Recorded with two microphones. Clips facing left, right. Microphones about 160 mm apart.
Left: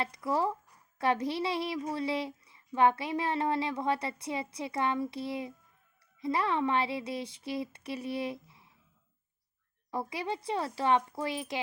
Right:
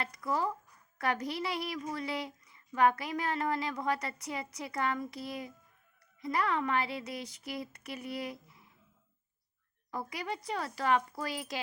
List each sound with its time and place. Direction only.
0.0 s a woman's voice: 25° left (ahead or behind)
9.9 s a woman's voice: 25° left (ahead or behind)